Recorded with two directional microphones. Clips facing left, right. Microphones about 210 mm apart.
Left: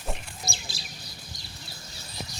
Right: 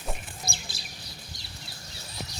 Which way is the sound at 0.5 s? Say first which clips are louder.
Left 1 dB; 55° right (ahead or behind).